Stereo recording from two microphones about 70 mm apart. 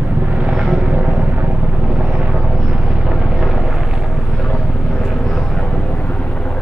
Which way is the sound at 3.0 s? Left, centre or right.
Centre.